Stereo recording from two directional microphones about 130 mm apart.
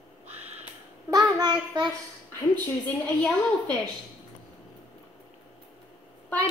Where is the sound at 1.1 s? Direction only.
30° right (ahead or behind).